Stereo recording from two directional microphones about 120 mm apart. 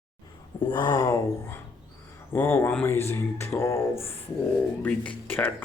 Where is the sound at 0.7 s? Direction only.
40° left (ahead or behind).